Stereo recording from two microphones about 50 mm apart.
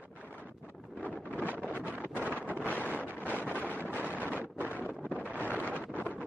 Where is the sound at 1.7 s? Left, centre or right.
Right.